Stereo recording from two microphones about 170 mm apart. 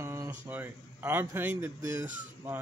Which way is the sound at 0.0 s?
15° right (ahead or behind).